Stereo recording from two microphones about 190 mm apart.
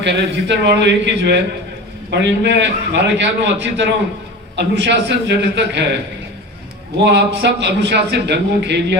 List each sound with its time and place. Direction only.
0.0 s a man's voice: 65° right (ahead or behind)
7.0 s a man's voice: 65° right (ahead or behind)